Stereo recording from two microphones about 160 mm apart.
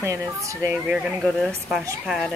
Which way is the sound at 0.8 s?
Centre (ahead or behind).